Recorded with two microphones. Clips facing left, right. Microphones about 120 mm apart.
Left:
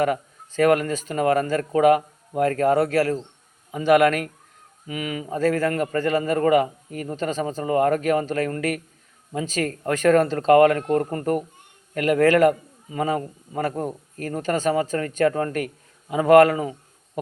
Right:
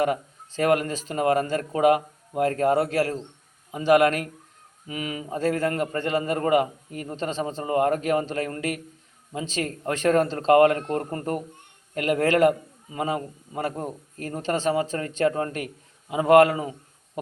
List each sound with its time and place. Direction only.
0.0 s a man's voice: 30° right (ahead or behind)